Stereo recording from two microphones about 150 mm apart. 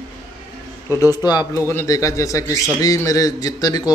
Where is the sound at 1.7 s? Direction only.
20° left (ahead or behind).